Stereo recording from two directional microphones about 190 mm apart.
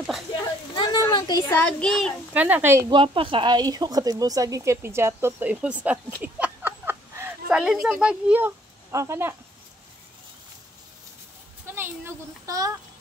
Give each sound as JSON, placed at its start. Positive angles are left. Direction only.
{"t": 0.7, "sound": "a sound", "side_deg": 20}
{"t": 1.6, "sound": "a child's voice", "side_deg": 5}
{"t": 2.3, "sound": "speech", "side_deg": -10}
{"t": 2.9, "sound": "a woman's voice", "side_deg": -25}
{"t": 6.2, "sound": "a sound", "side_deg": -10}
{"t": 11.6, "sound": "a child's voice", "side_deg": -10}